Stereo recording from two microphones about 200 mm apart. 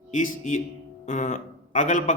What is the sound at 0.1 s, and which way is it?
Speech, 40° left (ahead or behind).